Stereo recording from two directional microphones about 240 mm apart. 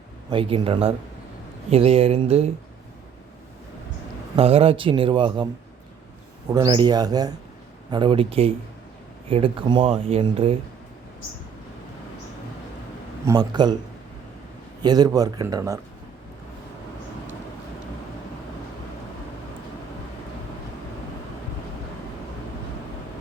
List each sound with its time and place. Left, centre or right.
0.3 s speech: right
4.4 s speech: right
6.5 s speech: centre
13.2 s speech: centre
14.8 s speech: centre